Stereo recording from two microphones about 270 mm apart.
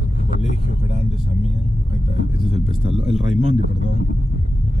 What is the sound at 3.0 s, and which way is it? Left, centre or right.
Speech, centre.